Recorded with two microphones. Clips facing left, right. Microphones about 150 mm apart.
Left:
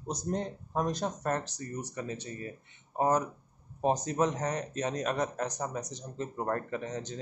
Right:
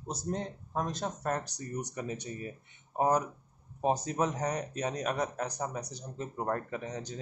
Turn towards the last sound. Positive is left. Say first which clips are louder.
# left 2 dB
turn(degrees=-10)  # may be behind; listen again after turning